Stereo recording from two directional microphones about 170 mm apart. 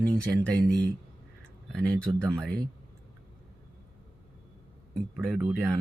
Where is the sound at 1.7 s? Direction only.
5° left (ahead or behind).